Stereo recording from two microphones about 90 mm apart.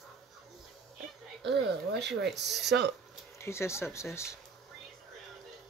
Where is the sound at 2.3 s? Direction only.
Centre (ahead or behind).